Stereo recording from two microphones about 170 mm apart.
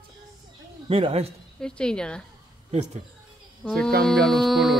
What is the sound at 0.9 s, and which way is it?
Speech, 35° right (ahead or behind).